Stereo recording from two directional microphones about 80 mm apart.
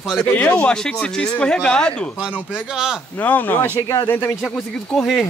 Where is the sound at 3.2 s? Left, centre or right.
Left.